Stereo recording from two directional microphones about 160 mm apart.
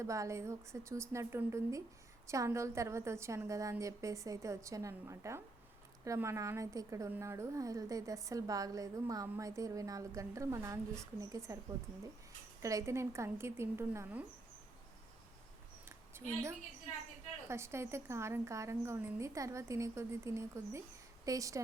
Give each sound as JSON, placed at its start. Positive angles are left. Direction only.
{"t": 0.0, "sound": "a woman's voice", "side_deg": -20}
{"t": 12.6, "sound": "a woman's voice", "side_deg": -20}
{"t": 15.9, "sound": "a sound", "side_deg": -15}
{"t": 17.5, "sound": "a woman's voice", "side_deg": -15}